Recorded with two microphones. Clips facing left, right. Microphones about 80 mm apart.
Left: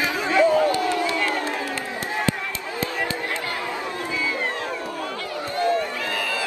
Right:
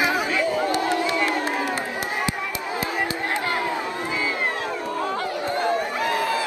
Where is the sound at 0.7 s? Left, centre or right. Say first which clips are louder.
Even; right.